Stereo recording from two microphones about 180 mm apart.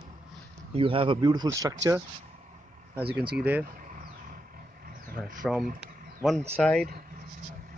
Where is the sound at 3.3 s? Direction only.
10° right (ahead or behind).